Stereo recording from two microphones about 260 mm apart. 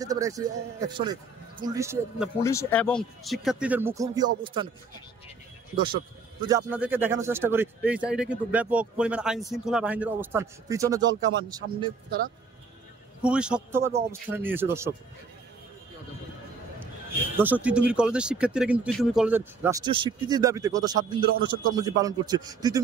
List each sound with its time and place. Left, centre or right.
0.0 s speech: centre
2.4 s speech: centre
6.4 s speech: centre
13.2 s speech: centre
17.4 s speech: centre